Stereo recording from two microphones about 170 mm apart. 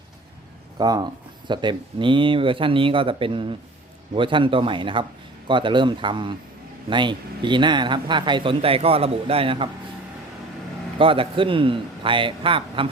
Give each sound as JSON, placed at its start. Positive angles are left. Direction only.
{"t": 0.8, "sound": "speech", "side_deg": -25}
{"t": 10.9, "sound": "speech", "side_deg": -30}